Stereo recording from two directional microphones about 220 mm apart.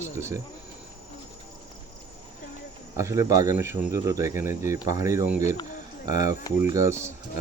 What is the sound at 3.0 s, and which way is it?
Speech, 15° right (ahead or behind).